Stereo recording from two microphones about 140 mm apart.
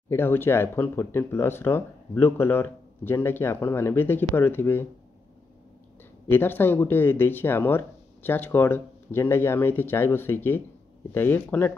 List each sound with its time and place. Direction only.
0.1 s speech: 15° left (ahead or behind)
6.3 s speech: 15° left (ahead or behind)